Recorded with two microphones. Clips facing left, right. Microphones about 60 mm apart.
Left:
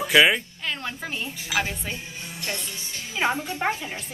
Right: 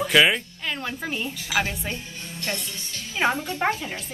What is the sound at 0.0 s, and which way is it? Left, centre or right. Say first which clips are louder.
A woman's voice: left 1 dB; centre.